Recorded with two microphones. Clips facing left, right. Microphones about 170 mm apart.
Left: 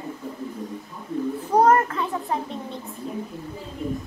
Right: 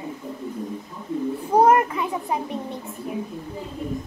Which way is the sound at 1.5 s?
10° right (ahead or behind).